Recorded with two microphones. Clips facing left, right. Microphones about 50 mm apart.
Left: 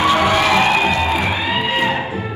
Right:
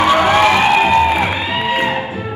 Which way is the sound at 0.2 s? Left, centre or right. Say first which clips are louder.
Right 3 dB; right.